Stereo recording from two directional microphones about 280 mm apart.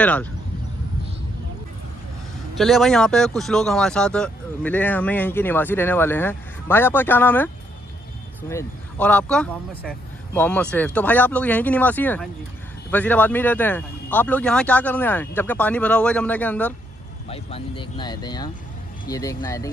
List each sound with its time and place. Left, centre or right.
0.0 s speech: centre
2.5 s speech: centre
17.3 s speech: centre